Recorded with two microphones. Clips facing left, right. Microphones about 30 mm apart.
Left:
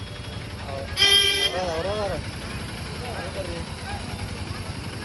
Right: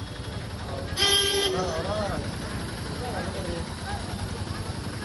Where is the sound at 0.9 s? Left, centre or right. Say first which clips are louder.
Left 4 dB; left.